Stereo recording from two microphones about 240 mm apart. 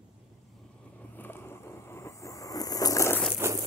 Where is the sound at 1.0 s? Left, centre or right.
Centre.